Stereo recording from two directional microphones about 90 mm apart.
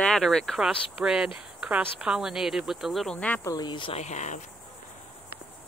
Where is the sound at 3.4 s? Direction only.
50° left (ahead or behind); by 4.0 s 65° left (ahead or behind).